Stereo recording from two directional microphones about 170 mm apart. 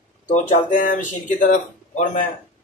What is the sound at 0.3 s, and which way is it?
Speech, 50° left (ahead or behind).